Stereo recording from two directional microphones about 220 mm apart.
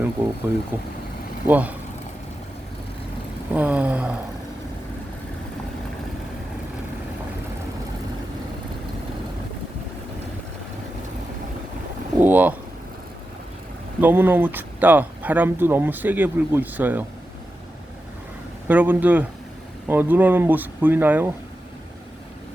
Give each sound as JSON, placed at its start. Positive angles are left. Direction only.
{"t": 0.2, "sound": "a sound", "side_deg": -10}
{"t": 1.5, "sound": "speech", "side_deg": -5}
{"t": 3.5, "sound": "speech", "side_deg": -5}
{"t": 12.2, "sound": "speech", "side_deg": -5}
{"t": 14.0, "sound": "speech", "side_deg": -10}
{"t": 18.7, "sound": "speech", "side_deg": -10}